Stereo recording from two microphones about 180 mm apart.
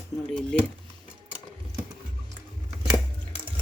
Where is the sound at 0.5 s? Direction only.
5° left (ahead or behind).